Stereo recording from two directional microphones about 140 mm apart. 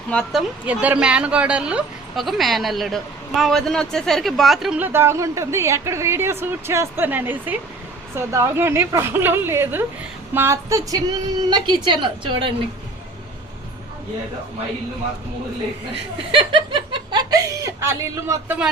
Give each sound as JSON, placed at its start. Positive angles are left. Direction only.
{"t": 0.1, "sound": "speech", "side_deg": 5}
{"t": 0.6, "sound": "a woman's voice", "side_deg": -10}
{"t": 4.8, "sound": "a woman's voice", "side_deg": -15}
{"t": 16.3, "sound": "snicker", "side_deg": -35}